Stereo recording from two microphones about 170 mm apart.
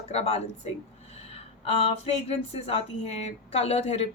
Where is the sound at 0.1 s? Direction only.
40° left (ahead or behind).